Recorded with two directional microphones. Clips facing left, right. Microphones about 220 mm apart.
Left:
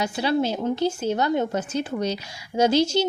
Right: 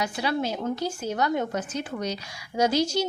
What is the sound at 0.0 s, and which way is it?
A woman's voice, 30° left (ahead or behind).